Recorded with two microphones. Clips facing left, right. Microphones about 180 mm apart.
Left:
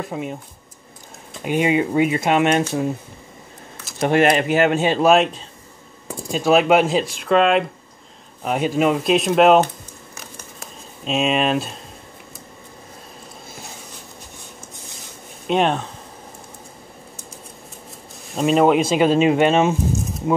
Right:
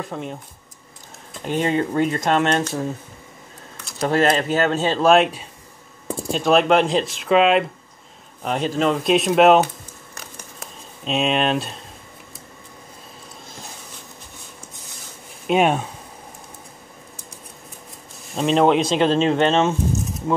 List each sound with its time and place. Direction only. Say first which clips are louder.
0.1 s speech: left 2 dB; 5° left (ahead or behind)
1.4 s speech: left 2 dB; 10° left (ahead or behind)
4.0 s speech: left 2 dB; 15° left (ahead or behind)
5.1 s speech: even; centre (ahead or behind)
6.0 s typing: right 5 dB; 30° right (ahead or behind)
6.3 s speech: left 1 dB; 5° left (ahead or behind)
10.1 s a sound: even; centre (ahead or behind)
15.4 s speech: right 1 dB; 5° right (ahead or behind)
18.3 s speech: left 1 dB; 5° left (ahead or behind)